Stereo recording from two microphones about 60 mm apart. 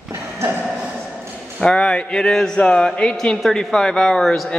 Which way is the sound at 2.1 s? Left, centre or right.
Centre.